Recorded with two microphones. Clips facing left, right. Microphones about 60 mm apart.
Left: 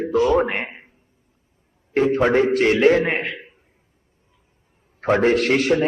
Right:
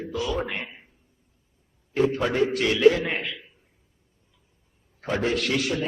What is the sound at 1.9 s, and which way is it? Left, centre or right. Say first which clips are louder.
A man's voice: left 6 dB; left.